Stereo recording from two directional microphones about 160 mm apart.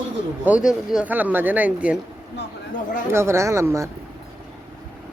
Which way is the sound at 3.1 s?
15° right (ahead or behind).